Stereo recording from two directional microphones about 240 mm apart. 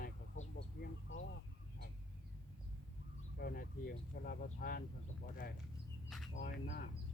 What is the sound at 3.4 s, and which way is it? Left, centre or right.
Speech, left.